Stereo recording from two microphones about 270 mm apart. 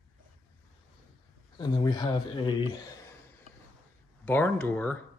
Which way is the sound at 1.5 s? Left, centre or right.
Centre.